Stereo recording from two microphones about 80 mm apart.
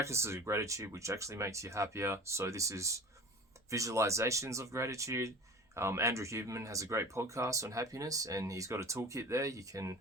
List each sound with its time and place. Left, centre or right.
0.0 s speech: right